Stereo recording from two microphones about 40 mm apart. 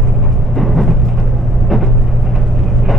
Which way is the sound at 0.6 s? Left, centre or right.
Centre.